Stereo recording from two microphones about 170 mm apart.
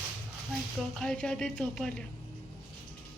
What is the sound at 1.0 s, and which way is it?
A woman's voice, 5° left (ahead or behind).